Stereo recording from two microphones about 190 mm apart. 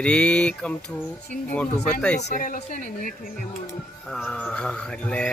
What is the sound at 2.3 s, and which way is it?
Speech, 45° left (ahead or behind).